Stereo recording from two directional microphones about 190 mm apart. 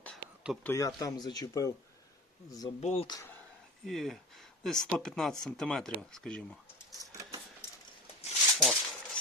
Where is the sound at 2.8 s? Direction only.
30° left (ahead or behind).